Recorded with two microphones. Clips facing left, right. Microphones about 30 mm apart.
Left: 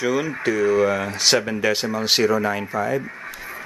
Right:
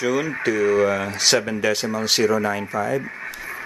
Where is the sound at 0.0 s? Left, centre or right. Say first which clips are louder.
Even; centre.